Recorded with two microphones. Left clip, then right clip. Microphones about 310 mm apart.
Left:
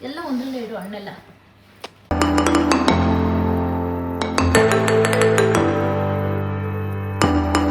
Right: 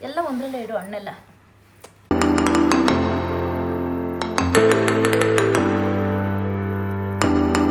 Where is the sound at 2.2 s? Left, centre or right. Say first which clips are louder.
Left 1 dB; centre.